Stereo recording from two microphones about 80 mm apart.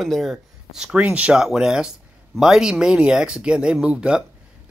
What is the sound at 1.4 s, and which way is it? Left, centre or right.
Speech, centre.